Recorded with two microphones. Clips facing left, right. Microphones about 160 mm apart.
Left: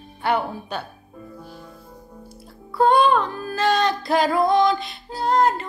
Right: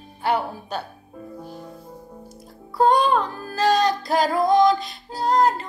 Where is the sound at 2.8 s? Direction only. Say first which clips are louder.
Left 1 dB; 40° right (ahead or behind).